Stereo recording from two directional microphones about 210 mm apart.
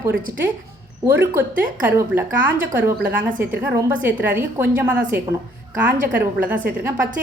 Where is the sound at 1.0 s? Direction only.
10° right (ahead or behind).